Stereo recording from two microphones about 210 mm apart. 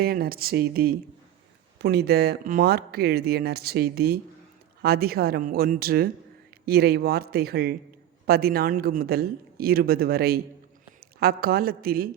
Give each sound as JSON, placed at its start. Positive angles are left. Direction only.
{"t": 0.0, "sound": "a woman's voice", "side_deg": -45}